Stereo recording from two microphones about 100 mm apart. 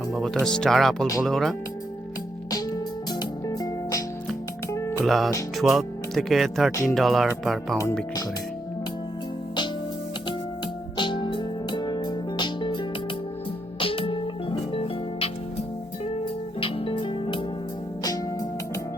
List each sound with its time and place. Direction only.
0.1 s speech: centre (ahead or behind)
2.5 s music: 40° left (ahead or behind)
4.7 s music: 25° left (ahead or behind)
5.0 s speech: centre (ahead or behind)
10.9 s music: 50° left (ahead or behind)
13.7 s music: 65° left (ahead or behind)
18.0 s music: 40° left (ahead or behind)